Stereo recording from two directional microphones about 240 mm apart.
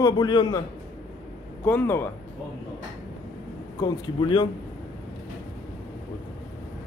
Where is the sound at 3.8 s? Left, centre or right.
Centre.